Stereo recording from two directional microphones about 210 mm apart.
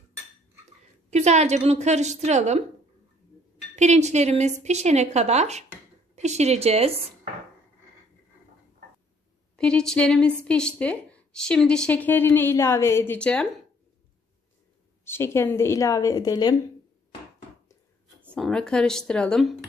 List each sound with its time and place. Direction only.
1.1 s a woman's voice: 30° right (ahead or behind)
3.7 s a woman's voice: 35° right (ahead or behind)
9.6 s speech: 5° left (ahead or behind)
15.0 s speech: 10° left (ahead or behind)
18.3 s speech: 5° left (ahead or behind)